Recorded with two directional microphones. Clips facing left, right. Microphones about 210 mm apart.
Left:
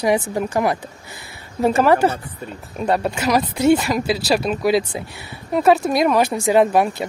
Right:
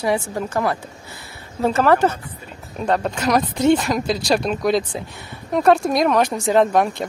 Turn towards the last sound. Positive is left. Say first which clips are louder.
# left 1 dB
turn(degrees=5)  # may be behind; listen again after turning